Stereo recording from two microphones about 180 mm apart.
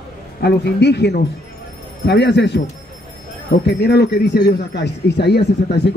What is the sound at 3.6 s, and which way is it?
A man's voice, 65° left (ahead or behind).